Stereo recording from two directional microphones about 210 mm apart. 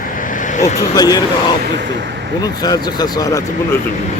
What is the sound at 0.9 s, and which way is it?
Speech, 15° left (ahead or behind).